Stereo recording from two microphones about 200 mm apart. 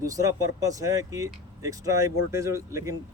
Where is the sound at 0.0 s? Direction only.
15° right (ahead or behind).